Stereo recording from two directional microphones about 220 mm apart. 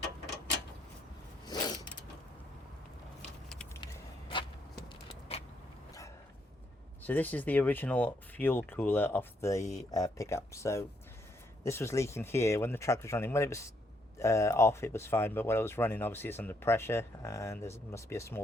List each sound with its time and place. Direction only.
1.5 s mechanisms: 20° left (ahead or behind)
3.2 s vehicle: 5° left (ahead or behind)
5.3 s vehicle: 25° left (ahead or behind)
7.0 s speech: 10° left (ahead or behind)